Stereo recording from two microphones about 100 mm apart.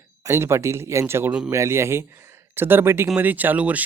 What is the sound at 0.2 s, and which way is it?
Speech, 25° right (ahead or behind).